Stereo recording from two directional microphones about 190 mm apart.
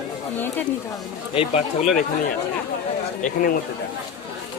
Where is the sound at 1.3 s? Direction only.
35° left (ahead or behind).